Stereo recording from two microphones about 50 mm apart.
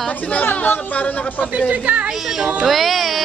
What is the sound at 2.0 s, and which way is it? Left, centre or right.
Speech, centre.